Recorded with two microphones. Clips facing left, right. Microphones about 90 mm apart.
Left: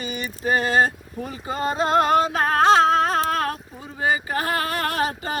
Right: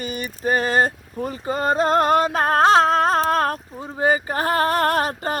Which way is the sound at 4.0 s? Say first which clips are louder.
Right 3 dB; 40° right (ahead or behind).